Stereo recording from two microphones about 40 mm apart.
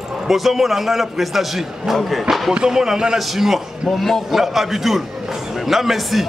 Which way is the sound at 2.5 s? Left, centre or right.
Centre.